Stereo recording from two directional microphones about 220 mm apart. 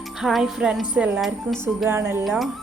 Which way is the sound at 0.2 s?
Centre (ahead or behind).